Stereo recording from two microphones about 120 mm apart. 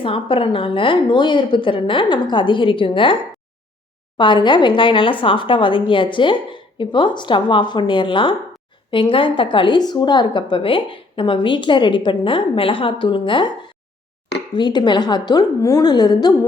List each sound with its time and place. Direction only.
0.0 s a woman's voice: 45° left (ahead or behind)
4.2 s a woman's voice: 40° left (ahead or behind)
14.5 s a woman's voice: 40° left (ahead or behind)